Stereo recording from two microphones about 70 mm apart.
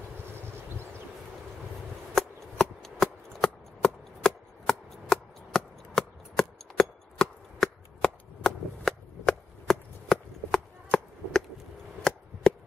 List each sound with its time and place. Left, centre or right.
2.1 s shuffling cards: centre
3.8 s chopping: centre
12.1 s chop: centre